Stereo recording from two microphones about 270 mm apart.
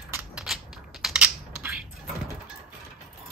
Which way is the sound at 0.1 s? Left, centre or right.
Centre.